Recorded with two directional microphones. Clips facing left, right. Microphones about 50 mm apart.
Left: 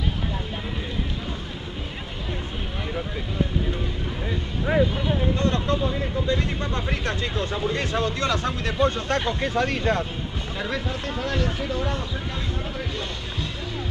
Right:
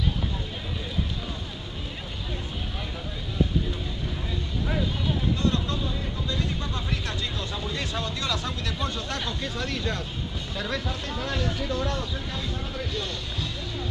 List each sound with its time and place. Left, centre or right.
4.3 s speech: left
10.6 s speech: left